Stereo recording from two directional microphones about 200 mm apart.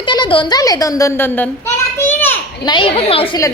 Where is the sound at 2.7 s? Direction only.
25° left (ahead or behind).